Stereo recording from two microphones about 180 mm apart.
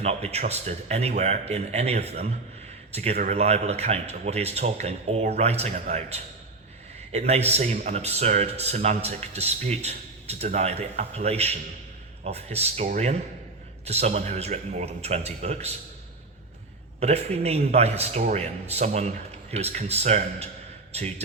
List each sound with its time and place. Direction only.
0.0 s speech: 35° right (ahead or behind)
17.0 s speech: 35° right (ahead or behind)